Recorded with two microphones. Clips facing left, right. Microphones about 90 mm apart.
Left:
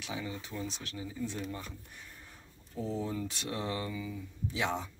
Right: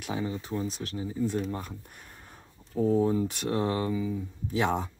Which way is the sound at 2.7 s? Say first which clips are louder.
Right 11 dB; 50° right (ahead or behind).